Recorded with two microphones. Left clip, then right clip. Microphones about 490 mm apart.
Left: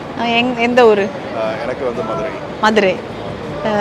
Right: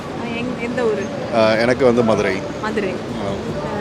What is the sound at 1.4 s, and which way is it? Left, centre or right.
Speech, right.